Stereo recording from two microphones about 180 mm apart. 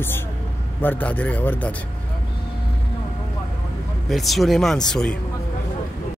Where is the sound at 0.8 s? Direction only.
10° left (ahead or behind).